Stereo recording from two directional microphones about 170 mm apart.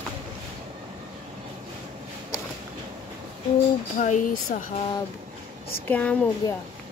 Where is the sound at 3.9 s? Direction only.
50° left (ahead or behind).